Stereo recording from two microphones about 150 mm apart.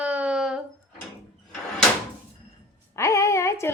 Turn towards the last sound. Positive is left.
turn(degrees=20)  # may be behind; listen again after turning